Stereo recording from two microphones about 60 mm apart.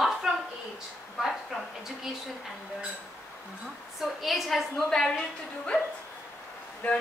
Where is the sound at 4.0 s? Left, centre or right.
Centre.